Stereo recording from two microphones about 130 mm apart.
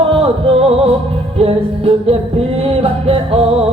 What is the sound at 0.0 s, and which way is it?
Music, 50° right (ahead or behind).